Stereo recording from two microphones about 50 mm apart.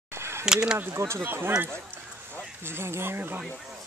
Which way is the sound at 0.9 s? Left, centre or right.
Right.